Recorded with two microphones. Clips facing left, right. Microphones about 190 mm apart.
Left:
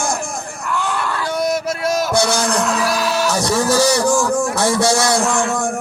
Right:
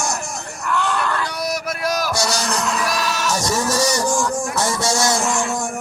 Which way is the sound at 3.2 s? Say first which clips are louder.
Left 3 dB; 60° left (ahead or behind).